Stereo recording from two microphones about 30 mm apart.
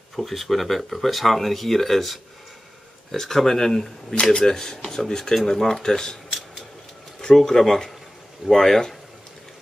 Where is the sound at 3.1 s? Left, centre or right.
Centre.